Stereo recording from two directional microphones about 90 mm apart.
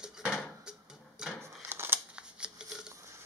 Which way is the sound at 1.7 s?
25° right (ahead or behind).